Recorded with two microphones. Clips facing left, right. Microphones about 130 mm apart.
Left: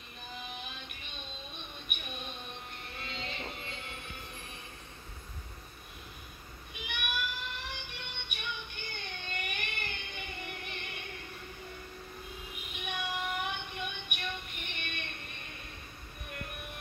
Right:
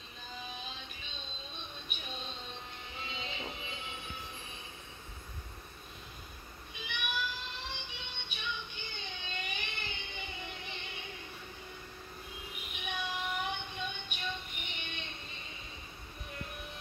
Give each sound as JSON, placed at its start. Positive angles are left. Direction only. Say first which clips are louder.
{"t": 0.3, "sound": "music", "louder": "left 1 dB", "side_deg": 60}
{"t": 3.5, "sound": "train", "louder": "even", "side_deg": 60}
{"t": 6.7, "sound": "music", "louder": "left 1 dB", "side_deg": 55}
{"t": 12.7, "sound": "child singing", "louder": "left 1 dB", "side_deg": 55}